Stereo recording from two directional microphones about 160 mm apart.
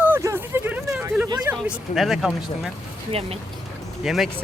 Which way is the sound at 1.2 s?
25° right (ahead or behind).